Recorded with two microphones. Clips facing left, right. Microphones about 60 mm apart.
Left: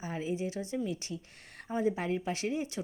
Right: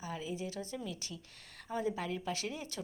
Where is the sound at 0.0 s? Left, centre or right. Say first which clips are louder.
Left 5 dB; left.